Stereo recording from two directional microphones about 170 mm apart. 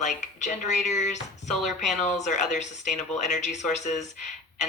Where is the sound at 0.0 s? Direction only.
45° left (ahead or behind).